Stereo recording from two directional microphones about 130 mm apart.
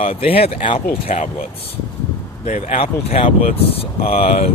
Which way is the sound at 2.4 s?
70° left (ahead or behind).